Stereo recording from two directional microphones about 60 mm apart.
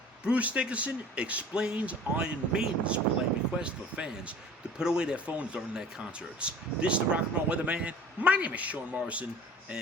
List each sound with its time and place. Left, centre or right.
0.3 s speech: right